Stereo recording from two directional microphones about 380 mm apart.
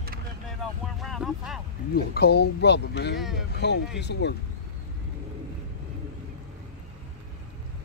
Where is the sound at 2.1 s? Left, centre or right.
Left.